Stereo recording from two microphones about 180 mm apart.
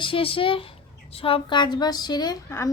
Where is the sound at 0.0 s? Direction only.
30° left (ahead or behind).